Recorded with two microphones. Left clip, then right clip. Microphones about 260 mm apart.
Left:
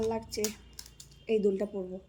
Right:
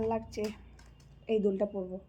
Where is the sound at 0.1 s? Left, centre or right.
Centre.